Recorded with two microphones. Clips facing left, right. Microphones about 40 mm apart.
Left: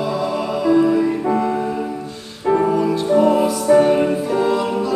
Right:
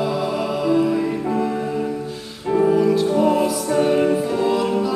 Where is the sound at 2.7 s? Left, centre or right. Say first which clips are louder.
Left 1 dB; centre.